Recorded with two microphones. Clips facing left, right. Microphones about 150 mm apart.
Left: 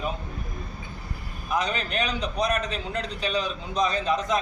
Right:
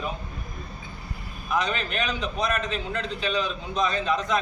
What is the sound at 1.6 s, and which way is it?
A man's voice, 40° left (ahead or behind).